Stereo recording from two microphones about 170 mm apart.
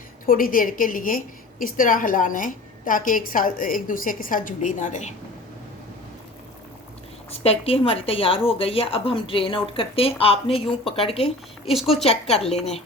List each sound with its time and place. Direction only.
0.3 s a woman's voice: 55° left (ahead or behind)
7.3 s a woman's voice: 35° left (ahead or behind)
11.6 s speech: centre (ahead or behind)
12.0 s a woman's voice: 35° left (ahead or behind)